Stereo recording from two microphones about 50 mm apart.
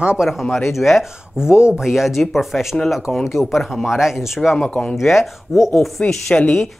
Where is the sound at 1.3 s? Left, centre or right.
Centre.